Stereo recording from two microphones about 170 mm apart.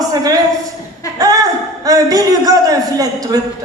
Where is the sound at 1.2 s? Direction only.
20° right (ahead or behind).